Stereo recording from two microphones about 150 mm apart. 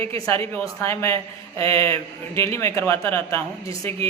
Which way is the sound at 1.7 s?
40° right (ahead or behind).